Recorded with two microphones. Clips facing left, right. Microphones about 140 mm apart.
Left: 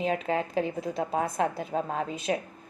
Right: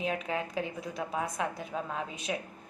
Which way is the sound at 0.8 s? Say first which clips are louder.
Left 6 dB; 50° left (ahead or behind).